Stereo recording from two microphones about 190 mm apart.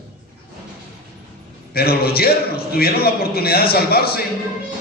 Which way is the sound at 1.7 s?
55° left (ahead or behind).